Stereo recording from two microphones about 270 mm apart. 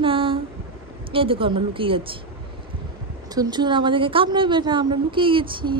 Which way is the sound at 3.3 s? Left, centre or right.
Centre.